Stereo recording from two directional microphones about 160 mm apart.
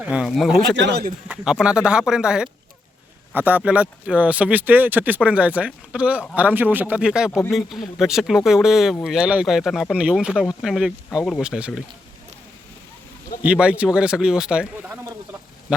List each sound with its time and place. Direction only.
0.0 s speech: 5° right (ahead or behind)
0.8 s speech: 90° right
1.3 s speech: 5° right (ahead or behind)
13.4 s speech: 5° right (ahead or behind)